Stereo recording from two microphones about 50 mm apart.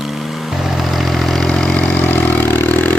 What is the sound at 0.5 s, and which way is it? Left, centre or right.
Vehicle, centre.